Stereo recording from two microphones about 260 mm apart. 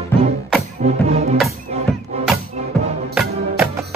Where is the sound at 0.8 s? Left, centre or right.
Right.